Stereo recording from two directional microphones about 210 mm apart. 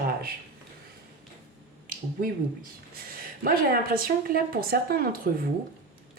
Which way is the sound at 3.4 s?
45° right (ahead or behind).